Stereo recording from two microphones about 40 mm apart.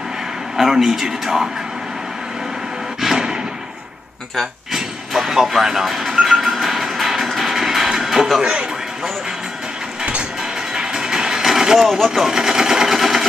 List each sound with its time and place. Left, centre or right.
0.6 s a man's voice: centre
3.0 s a sound: centre
4.7 s a sound: centre
8.4 s speech: right
10.7 s music: centre
11.8 s speech: centre
12.3 s sewing machine: centre